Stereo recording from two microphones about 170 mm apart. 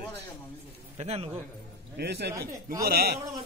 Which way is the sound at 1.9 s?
75° right (ahead or behind).